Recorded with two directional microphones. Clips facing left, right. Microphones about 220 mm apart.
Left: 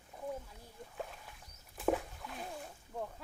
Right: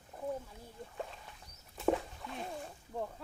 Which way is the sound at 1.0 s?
5° left (ahead or behind).